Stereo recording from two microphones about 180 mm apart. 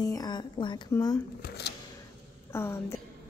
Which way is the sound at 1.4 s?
65° left (ahead or behind).